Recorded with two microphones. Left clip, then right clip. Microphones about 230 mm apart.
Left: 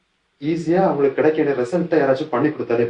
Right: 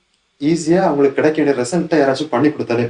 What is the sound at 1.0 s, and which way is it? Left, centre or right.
Speech, right.